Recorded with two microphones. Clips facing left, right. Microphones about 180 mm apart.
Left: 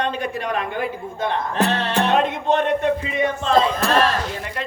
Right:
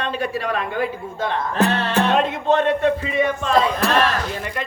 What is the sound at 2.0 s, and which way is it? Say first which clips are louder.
A man's voice: left 1 dB; 20° left (ahead or behind).